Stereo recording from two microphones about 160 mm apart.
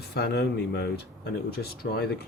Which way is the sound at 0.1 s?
85° left.